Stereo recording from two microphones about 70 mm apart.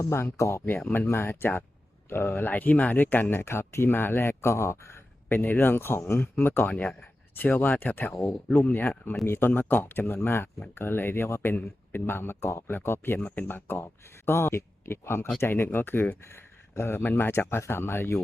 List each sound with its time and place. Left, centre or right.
0.0 s speech: left
5.3 s speech: left